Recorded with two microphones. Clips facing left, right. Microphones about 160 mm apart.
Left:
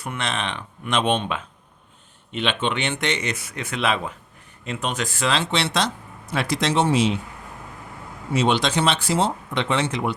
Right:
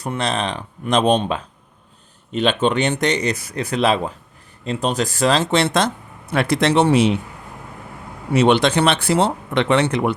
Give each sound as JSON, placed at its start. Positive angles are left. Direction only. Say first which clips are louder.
{"t": 0.0, "sound": "speech", "louder": "right 5 dB", "side_deg": -35}
{"t": 8.3, "sound": "speech", "louder": "right 6 dB", "side_deg": -65}